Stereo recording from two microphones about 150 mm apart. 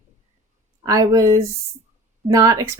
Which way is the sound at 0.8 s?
25° right (ahead or behind).